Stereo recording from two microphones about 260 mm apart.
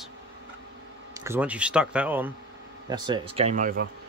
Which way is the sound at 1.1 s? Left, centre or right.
Centre.